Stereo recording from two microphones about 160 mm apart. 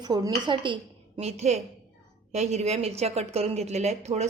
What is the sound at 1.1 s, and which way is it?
A woman's voice, 45° right (ahead or behind).